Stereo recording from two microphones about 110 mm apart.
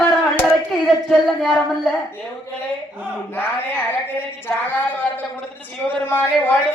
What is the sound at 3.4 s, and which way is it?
Speech, 20° left (ahead or behind).